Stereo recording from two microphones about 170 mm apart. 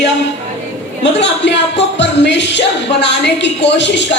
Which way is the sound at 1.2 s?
90° left.